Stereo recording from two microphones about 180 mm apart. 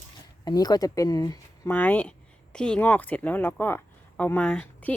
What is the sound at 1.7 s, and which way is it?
Speech, 10° left (ahead or behind).